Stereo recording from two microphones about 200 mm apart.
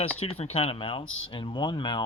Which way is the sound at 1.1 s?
75° left (ahead or behind).